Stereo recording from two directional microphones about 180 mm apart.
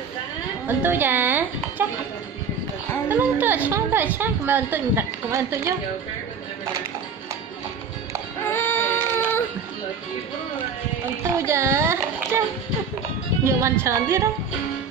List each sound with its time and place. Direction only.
0.7 s speech: 10° right (ahead or behind)
3.1 s a woman's voice: 10° right (ahead or behind)
8.5 s a sound: 10° left (ahead or behind)
11.2 s child singing: 15° right (ahead or behind)
13.4 s a woman's voice: 15° right (ahead or behind)